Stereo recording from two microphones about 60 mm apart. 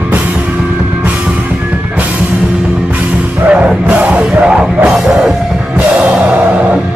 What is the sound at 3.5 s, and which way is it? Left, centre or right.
Music, right.